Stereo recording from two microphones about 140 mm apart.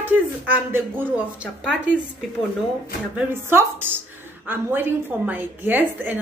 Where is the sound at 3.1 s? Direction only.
15° right (ahead or behind).